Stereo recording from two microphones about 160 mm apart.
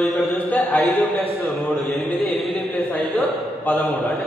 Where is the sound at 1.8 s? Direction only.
Centre (ahead or behind).